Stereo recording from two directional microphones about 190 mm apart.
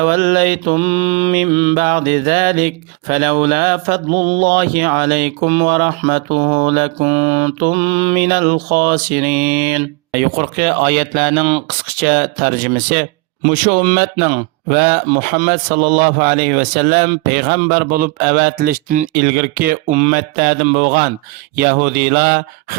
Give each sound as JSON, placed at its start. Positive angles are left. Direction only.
{"t": 0.0, "sound": "mantra", "side_deg": -45}